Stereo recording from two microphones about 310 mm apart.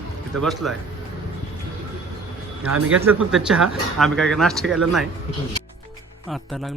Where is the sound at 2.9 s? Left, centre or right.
Centre.